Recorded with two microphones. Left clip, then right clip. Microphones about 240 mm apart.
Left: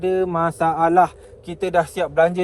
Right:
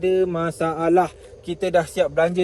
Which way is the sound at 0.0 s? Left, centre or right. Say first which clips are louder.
Left 1 dB; centre.